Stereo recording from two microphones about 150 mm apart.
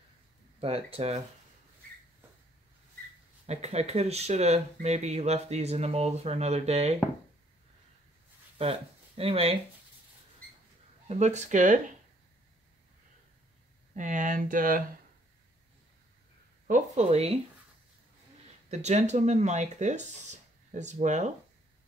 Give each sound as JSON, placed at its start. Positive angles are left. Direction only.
{"t": 0.6, "sound": "speech", "side_deg": -40}
{"t": 3.4, "sound": "speech", "side_deg": -45}
{"t": 8.5, "sound": "speech", "side_deg": -40}
{"t": 11.1, "sound": "speech", "side_deg": -50}
{"t": 13.9, "sound": "speech", "side_deg": -55}
{"t": 16.6, "sound": "speech", "side_deg": -55}
{"t": 18.7, "sound": "speech", "side_deg": -50}